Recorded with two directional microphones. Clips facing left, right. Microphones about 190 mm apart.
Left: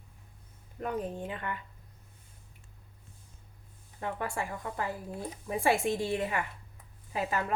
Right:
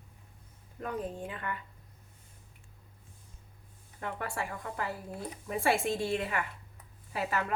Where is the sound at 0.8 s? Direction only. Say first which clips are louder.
Left 2 dB; 25° left (ahead or behind).